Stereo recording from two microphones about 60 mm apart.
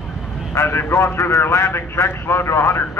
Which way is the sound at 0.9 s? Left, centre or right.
Left.